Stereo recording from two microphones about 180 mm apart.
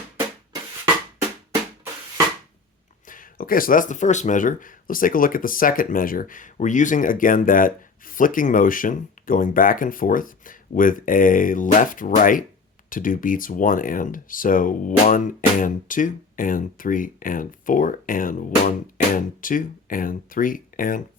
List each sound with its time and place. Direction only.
3.1 s speech: 50° left (ahead or behind)